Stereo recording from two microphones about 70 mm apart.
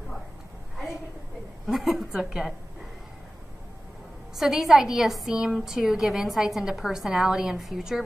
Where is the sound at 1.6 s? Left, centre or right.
Centre.